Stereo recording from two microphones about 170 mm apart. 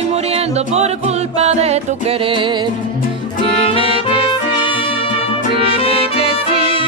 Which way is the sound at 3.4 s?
35° left (ahead or behind).